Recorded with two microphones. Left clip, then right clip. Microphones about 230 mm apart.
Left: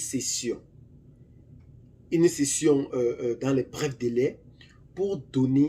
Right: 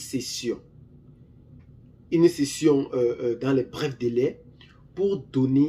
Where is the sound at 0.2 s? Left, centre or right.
Right.